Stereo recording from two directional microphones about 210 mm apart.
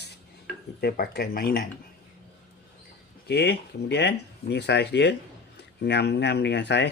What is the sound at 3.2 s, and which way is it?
Speech, 50° left (ahead or behind).